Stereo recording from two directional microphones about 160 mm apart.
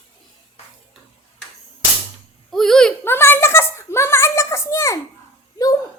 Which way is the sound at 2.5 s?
5° left (ahead or behind).